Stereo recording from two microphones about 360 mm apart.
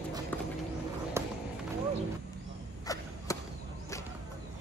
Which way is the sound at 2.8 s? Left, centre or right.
Centre.